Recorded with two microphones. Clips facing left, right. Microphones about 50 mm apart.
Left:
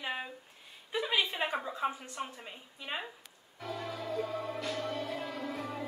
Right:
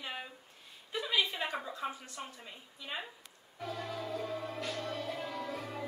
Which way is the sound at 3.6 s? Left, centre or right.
Centre.